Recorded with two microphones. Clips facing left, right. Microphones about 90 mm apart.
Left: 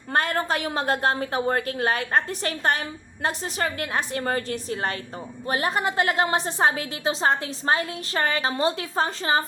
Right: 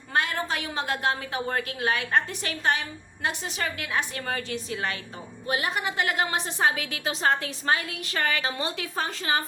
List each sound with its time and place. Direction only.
0.1 s a woman's voice: 45° left (ahead or behind)